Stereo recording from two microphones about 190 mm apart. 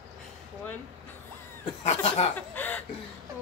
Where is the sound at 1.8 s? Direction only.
35° left (ahead or behind).